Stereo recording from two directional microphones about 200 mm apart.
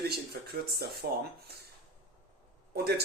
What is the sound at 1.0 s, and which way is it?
Speech, 50° right (ahead or behind).